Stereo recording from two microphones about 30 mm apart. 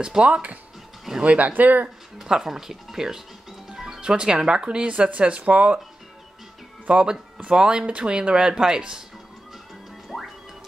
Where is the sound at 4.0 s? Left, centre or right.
Right.